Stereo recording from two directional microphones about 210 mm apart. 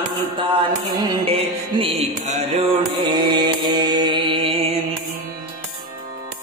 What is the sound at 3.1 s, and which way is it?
Mantra, 20° right (ahead or behind).